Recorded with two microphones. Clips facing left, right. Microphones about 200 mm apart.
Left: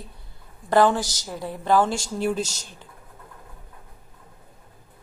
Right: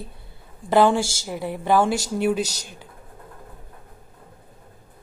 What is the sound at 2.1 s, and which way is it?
Speech, centre (ahead or behind).